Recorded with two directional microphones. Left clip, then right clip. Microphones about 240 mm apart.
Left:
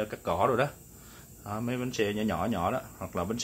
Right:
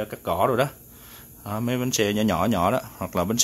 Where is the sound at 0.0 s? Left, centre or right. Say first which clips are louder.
Right 4 dB; right.